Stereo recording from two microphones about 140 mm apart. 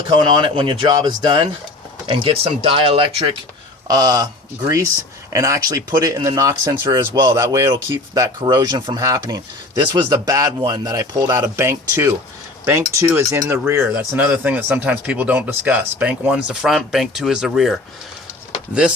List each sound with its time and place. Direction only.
0.1 s speech: 35° right (ahead or behind)
3.8 s speech: 30° right (ahead or behind); by 17.7 s 5° right (ahead or behind)